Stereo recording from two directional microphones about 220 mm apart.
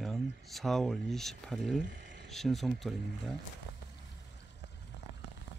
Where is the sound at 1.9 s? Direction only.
55° right (ahead or behind).